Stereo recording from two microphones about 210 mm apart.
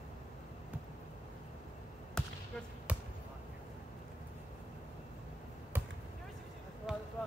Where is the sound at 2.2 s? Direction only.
5° left (ahead or behind).